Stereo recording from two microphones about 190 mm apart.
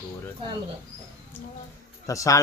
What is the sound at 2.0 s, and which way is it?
Speech, 15° left (ahead or behind).